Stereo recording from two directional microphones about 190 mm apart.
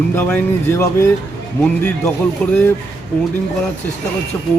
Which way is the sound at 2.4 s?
5° left (ahead or behind).